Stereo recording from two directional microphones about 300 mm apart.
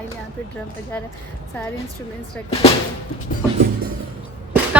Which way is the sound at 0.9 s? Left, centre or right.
Centre.